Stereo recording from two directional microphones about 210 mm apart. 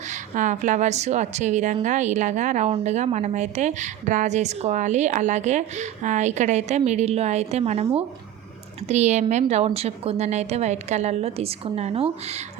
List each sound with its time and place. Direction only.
0.1 s a woman's voice: 35° right (ahead or behind)
8.9 s a woman's voice: 30° right (ahead or behind)